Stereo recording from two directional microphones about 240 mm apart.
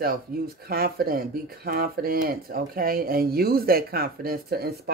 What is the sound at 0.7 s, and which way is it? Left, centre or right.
Speech, right.